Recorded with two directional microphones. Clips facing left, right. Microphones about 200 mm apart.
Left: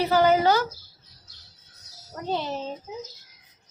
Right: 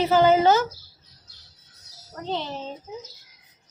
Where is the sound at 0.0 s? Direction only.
20° right (ahead or behind).